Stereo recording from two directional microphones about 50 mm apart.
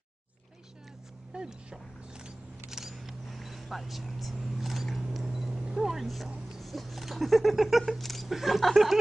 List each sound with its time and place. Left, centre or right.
1.3 s single-lens reflex camera: centre
2.8 s vehicle: centre
4.9 s single-lens reflex camera: centre
5.2 s vehicle: centre
6.6 s speech: centre